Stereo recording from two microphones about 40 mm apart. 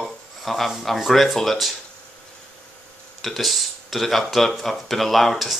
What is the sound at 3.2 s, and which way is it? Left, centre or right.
Speech, centre.